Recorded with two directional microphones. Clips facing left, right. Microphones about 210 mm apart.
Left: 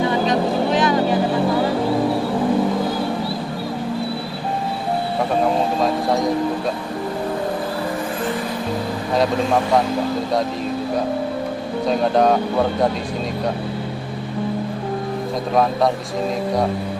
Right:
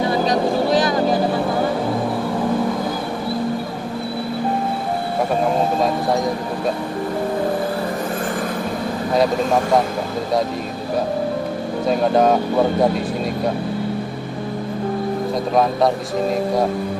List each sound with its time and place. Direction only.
0.1 s vehicle: 35° right (ahead or behind)
11.9 s speech: 5° right (ahead or behind)